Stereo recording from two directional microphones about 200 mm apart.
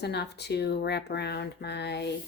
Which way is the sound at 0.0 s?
55° left (ahead or behind).